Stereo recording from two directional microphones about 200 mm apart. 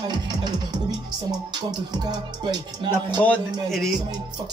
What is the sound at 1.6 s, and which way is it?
Music, 20° right (ahead or behind).